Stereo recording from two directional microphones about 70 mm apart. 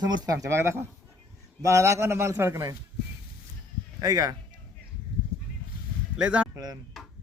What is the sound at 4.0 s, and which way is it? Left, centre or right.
Speech, right.